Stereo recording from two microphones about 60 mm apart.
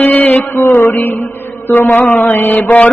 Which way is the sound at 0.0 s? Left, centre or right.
Left.